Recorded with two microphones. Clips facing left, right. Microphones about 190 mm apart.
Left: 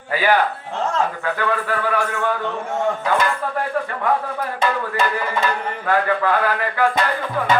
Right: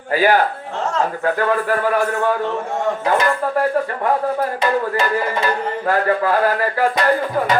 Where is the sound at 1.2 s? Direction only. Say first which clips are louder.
Right 4 dB; 40° right (ahead or behind).